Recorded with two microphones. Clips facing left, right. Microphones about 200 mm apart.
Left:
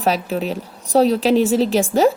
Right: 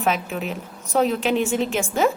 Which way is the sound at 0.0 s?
35° left (ahead or behind).